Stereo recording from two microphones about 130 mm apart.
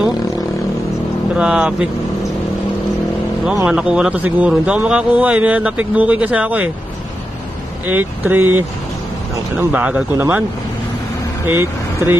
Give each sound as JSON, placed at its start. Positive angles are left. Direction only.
{"t": 1.3, "sound": "speech", "side_deg": -5}
{"t": 3.6, "sound": "speech", "side_deg": -5}
{"t": 7.8, "sound": "speech", "side_deg": -15}
{"t": 11.4, "sound": "speech", "side_deg": -20}